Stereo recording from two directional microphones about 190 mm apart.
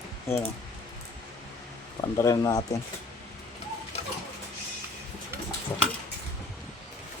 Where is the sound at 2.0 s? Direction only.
15° left (ahead or behind).